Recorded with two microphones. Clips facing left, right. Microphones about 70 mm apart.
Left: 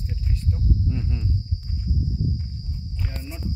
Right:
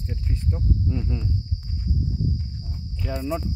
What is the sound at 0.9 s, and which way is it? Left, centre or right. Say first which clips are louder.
Speech: right 1 dB; centre.